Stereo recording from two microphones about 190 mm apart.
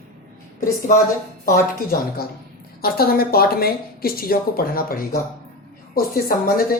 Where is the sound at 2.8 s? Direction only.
55° left (ahead or behind).